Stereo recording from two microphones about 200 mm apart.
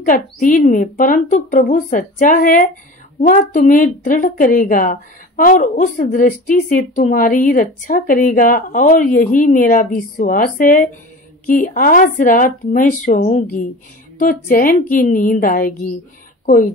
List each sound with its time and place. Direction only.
0.0 s a woman's voice: 40° left (ahead or behind)